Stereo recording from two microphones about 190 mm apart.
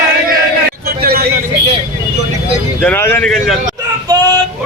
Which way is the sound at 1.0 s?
55° right (ahead or behind).